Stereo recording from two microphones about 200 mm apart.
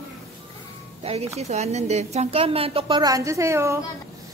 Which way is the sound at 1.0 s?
30° right (ahead or behind).